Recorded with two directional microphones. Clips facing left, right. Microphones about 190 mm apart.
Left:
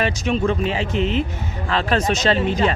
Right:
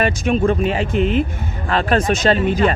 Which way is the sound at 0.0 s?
50° right (ahead or behind).